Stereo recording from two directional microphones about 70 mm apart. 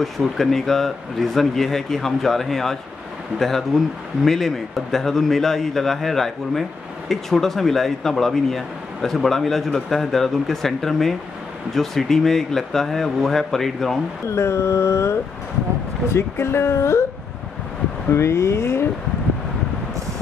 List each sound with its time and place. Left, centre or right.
0.0 s speech: centre
14.2 s mantra: left
16.1 s speech: left
18.1 s speech: left